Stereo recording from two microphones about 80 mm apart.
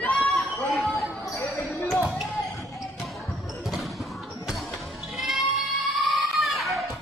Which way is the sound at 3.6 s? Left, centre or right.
Centre.